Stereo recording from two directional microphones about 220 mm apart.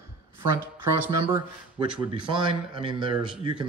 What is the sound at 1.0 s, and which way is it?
Speech, 15° right (ahead or behind).